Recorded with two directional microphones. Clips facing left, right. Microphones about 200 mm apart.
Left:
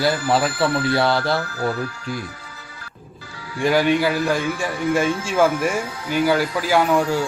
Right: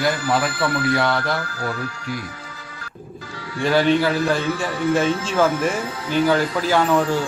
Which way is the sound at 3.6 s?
10° left (ahead or behind).